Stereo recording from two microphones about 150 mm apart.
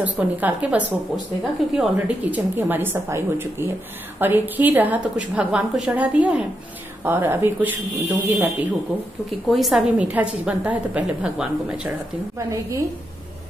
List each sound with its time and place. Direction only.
0.0 s a woman's voice: 10° right (ahead or behind)
9.5 s a woman's voice: centre (ahead or behind)
12.4 s a woman's voice: 20° right (ahead or behind)